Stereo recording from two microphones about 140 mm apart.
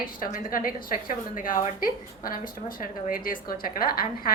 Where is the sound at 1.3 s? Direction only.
70° left (ahead or behind).